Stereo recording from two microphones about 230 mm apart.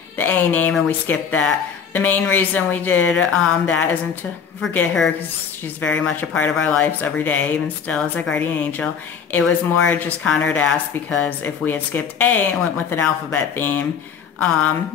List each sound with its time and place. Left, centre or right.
0.2 s speech: centre